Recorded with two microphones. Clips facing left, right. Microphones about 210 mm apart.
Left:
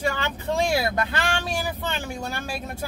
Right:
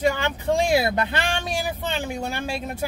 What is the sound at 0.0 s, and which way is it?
Speech, 15° right (ahead or behind).